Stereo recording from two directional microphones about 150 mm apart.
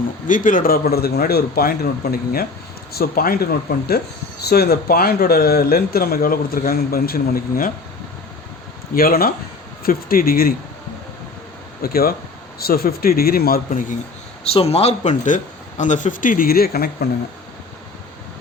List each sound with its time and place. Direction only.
0.3 s a man's voice: 65° left (ahead or behind)
9.0 s a man's voice: 80° left
11.8 s a man's voice: 85° left
14.5 s speech: 40° left (ahead or behind); by 17.1 s 90° left